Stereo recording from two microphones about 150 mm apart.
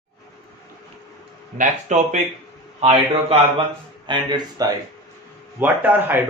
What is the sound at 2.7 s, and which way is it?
Speech, 40° right (ahead or behind).